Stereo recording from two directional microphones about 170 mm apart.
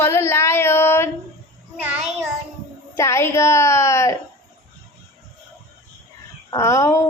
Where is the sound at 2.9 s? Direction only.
15° left (ahead or behind).